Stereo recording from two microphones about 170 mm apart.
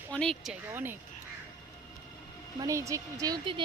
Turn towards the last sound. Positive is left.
turn(degrees=-25)  # may be behind; listen again after turning